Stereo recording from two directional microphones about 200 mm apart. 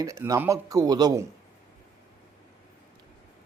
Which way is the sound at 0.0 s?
15° right (ahead or behind).